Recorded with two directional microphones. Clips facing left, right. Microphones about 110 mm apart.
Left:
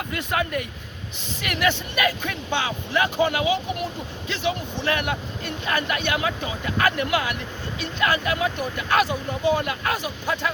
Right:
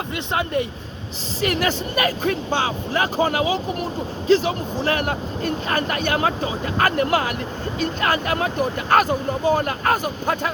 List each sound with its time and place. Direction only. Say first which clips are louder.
0.1 s speech: right 2 dB; 30° right (ahead or behind); by 10.5 s 45° right (ahead or behind)